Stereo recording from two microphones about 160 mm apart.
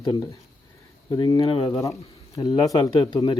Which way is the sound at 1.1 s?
20° left (ahead or behind).